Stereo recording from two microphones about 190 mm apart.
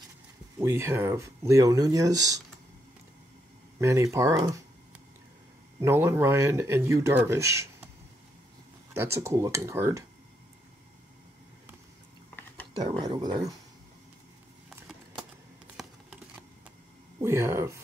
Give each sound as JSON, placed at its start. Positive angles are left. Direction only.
{"t": 0.6, "sound": "speech", "side_deg": -15}
{"t": 3.8, "sound": "speech", "side_deg": -15}
{"t": 5.8, "sound": "speech", "side_deg": -15}
{"t": 8.9, "sound": "speech", "side_deg": -15}
{"t": 13.0, "sound": "speech", "side_deg": -20}
{"t": 15.7, "sound": "computer keyboard", "side_deg": -5}
{"t": 17.2, "sound": "speech", "side_deg": -15}